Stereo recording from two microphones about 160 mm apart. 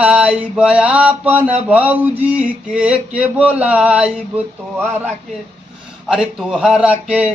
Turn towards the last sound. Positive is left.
turn(degrees=-10)  # may be behind; listen again after turning